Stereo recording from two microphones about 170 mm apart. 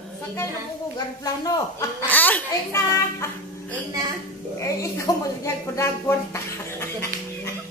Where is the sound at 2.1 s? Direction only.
10° left (ahead or behind).